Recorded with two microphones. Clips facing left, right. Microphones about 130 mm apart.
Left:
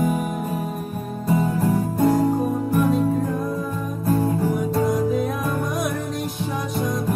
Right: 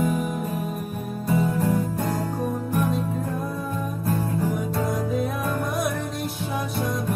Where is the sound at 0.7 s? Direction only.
Centre (ahead or behind).